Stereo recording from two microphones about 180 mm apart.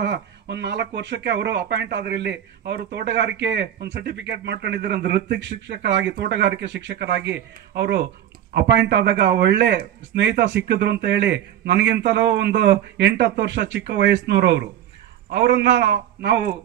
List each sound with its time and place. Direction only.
0.0 s speech: 75° right (ahead or behind)